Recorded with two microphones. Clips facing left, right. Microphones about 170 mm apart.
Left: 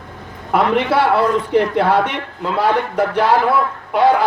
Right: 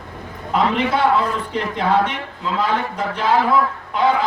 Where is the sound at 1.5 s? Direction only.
70° left (ahead or behind).